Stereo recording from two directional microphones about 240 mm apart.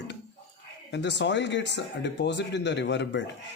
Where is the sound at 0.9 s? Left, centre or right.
Left.